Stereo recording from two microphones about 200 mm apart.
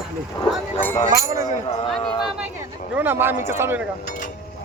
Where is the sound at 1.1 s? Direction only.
15° right (ahead or behind).